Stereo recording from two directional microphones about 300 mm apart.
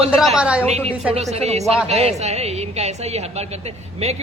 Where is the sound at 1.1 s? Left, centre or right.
Right.